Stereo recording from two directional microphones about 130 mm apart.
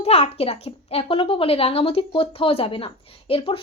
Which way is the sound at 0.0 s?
55° left (ahead or behind).